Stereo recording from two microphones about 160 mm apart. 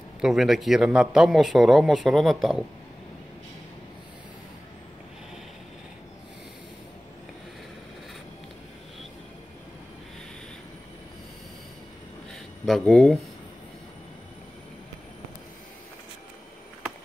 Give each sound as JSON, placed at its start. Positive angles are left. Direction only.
{"t": 0.2, "sound": "a man's voice", "side_deg": 0}
{"t": 12.6, "sound": "a man's voice", "side_deg": 0}